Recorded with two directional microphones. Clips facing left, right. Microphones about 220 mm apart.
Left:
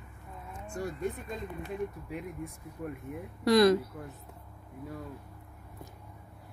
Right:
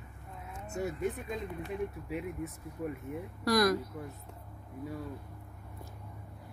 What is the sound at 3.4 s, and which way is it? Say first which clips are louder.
Speech: left 5 dB; 25° left (ahead or behind).